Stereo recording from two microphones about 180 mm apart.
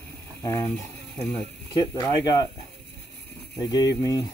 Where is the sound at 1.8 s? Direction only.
20° left (ahead or behind).